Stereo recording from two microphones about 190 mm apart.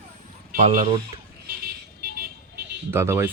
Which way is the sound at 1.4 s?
55° right (ahead or behind).